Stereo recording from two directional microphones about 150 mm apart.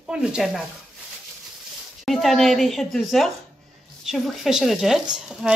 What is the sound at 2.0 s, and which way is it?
Speech, centre (ahead or behind).